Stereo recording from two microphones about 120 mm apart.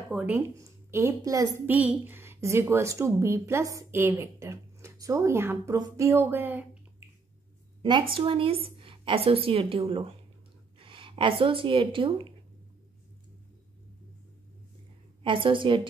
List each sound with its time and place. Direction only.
0.1 s speech: 10° right (ahead or behind)
0.6 s a woman's voice: 25° right (ahead or behind)
1.7 s a woman's voice: 15° right (ahead or behind)
7.8 s a woman's voice: 40° right (ahead or behind)
15.2 s a woman's voice: 45° right (ahead or behind)